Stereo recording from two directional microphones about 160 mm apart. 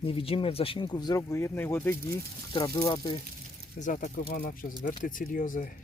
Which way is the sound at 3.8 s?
50° left (ahead or behind).